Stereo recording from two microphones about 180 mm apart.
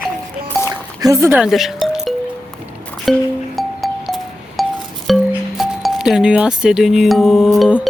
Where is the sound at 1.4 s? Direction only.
Centre (ahead or behind).